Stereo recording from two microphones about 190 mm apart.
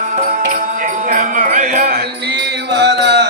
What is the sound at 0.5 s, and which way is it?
Music, 45° right (ahead or behind).